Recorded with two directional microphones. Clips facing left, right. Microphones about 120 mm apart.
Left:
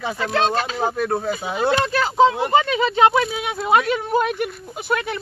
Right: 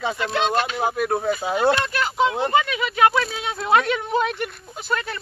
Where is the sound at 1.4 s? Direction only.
35° right (ahead or behind).